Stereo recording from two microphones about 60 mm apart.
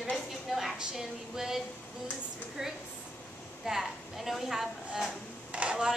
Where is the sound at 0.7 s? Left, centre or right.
Centre.